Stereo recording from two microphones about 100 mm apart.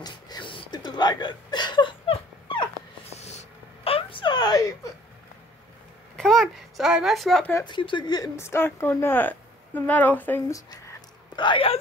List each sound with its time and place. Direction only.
0.0 s a sound: 50° left (ahead or behind)
2.4 s dog: 50° left (ahead or behind)
3.1 s writing: 90° left
3.8 s whimper: 65° left (ahead or behind); by 4.7 s 40° left (ahead or behind)
6.1 s a sound: 5° left (ahead or behind)
7.6 s speech: 55° left (ahead or behind)
8.4 s a woman's voice: 25° left (ahead or behind)
10.5 s a sound: 35° left (ahead or behind)
11.3 s speech: 55° left (ahead or behind)